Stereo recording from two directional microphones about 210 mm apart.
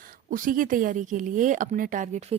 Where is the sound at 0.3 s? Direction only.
40° right (ahead or behind).